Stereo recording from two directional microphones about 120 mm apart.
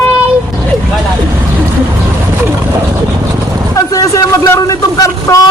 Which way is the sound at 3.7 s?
30° left (ahead or behind).